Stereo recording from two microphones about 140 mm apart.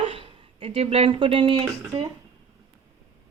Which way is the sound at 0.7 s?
45° right (ahead or behind).